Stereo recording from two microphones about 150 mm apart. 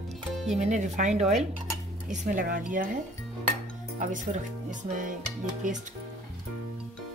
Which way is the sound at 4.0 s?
55° right (ahead or behind).